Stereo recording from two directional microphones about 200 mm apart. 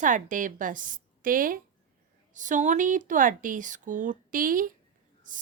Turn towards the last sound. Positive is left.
turn(degrees=-45)  # may be behind; listen again after turning